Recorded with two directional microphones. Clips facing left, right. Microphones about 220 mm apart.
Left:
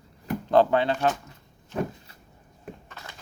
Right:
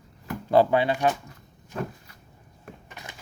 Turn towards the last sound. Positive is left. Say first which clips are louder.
# right 1 dB
turn(degrees=-15)  # may be behind; listen again after turning